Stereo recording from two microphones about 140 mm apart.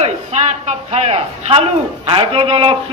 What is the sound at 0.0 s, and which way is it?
A man's voice, 50° right (ahead or behind).